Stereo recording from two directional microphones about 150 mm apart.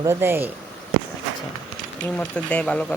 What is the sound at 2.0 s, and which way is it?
Speech, 10° left (ahead or behind).